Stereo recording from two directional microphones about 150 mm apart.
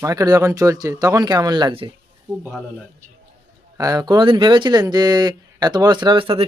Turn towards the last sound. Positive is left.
turn(degrees=-40)  # may be behind; listen again after turning